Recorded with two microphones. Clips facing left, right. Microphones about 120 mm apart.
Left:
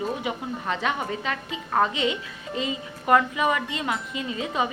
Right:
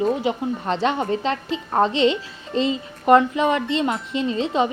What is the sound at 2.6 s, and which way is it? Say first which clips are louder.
A woman's voice: right 8 dB; 25° right (ahead or behind).